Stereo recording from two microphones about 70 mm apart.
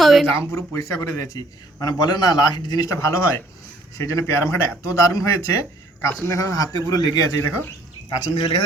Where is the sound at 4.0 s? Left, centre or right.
Left.